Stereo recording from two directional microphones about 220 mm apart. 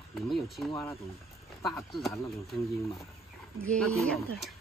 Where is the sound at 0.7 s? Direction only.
20° left (ahead or behind).